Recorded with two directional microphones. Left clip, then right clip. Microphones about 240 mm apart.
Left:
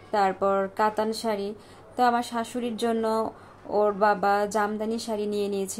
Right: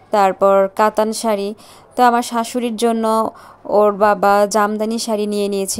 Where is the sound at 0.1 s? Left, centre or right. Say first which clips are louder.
Right 11 dB; right.